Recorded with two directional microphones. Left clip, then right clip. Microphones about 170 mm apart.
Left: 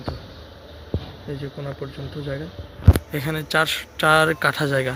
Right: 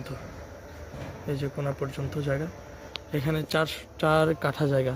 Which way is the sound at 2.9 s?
Centre (ahead or behind).